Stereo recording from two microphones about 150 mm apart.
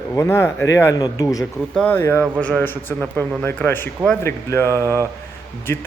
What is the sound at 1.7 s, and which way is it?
Speech, 5° left (ahead or behind).